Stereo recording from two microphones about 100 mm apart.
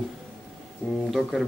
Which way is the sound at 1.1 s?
Centre (ahead or behind).